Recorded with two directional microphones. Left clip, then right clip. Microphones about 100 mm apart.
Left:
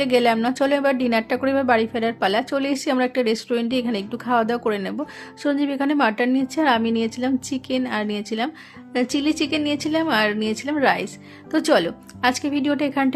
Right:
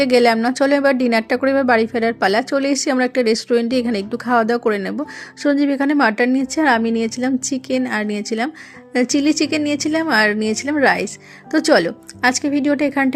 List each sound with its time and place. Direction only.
0.0 s a woman's voice: 45° right (ahead or behind)